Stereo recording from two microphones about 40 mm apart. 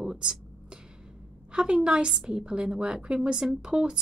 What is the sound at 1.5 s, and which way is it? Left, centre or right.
Speech, centre.